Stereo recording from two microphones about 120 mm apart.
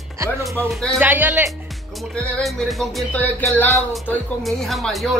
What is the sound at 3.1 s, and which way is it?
Speech, 15° left (ahead or behind).